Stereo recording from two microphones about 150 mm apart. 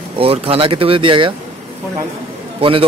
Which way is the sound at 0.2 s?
40° right (ahead or behind).